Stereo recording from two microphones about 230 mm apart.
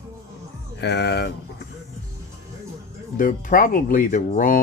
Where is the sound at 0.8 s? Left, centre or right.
Left.